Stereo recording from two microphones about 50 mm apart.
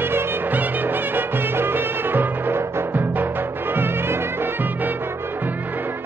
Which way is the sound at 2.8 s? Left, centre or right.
Right.